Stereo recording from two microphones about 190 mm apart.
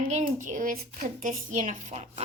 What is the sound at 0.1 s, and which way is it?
Speech, 40° right (ahead or behind).